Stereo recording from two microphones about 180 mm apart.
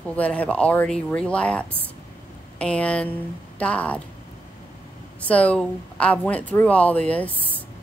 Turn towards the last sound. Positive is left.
turn(degrees=10)  # may be behind; listen again after turning